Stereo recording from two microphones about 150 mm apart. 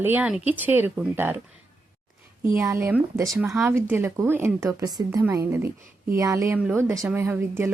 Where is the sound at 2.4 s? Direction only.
20° right (ahead or behind).